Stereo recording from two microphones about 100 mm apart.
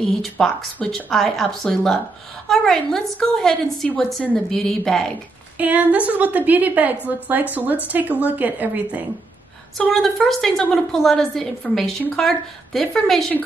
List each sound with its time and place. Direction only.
0.0 s a woman's voice: 5° left (ahead or behind)
5.6 s a woman's voice: 15° right (ahead or behind)
9.8 s a woman's voice: centre (ahead or behind)